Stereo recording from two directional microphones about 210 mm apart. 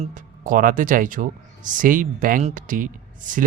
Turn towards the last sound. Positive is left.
turn(degrees=-40)  # may be behind; listen again after turning